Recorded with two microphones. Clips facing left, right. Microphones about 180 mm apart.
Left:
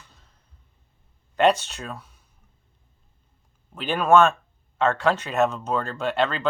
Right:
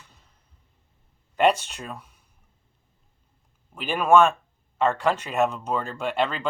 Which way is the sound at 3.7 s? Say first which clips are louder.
Even; 10° right (ahead or behind).